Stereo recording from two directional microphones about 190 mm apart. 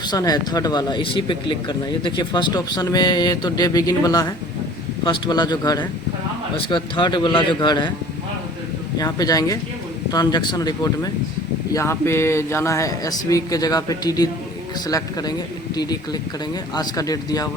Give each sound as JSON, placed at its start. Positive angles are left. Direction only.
{"t": 0.0, "sound": "speech", "side_deg": 20}
{"t": 9.0, "sound": "a man's voice", "side_deg": 20}